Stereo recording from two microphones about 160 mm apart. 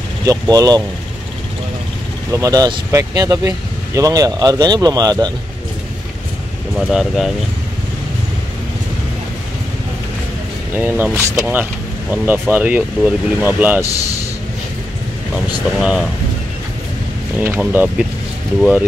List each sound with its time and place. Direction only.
0.2 s speech: 25° right (ahead or behind)
2.3 s speech: 20° right (ahead or behind)
6.9 s speech: centre (ahead or behind)
10.8 s speech: 10° right (ahead or behind)
15.3 s speech: 5° right (ahead or behind)
17.4 s speech: 10° right (ahead or behind)